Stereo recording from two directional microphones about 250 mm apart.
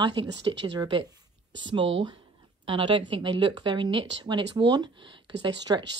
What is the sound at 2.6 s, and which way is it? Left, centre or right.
A woman's voice, centre.